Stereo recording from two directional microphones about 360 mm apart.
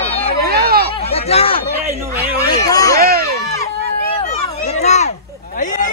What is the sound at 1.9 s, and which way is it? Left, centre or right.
Speech, centre.